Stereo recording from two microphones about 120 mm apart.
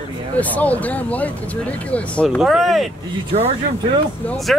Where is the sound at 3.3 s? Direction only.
55° right (ahead or behind).